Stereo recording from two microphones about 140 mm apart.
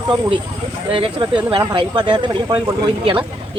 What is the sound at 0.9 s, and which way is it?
Speech, 35° right (ahead or behind).